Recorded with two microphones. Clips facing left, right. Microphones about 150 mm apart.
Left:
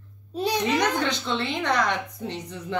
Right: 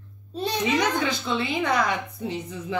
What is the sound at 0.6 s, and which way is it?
A woman's voice, 5° right (ahead or behind).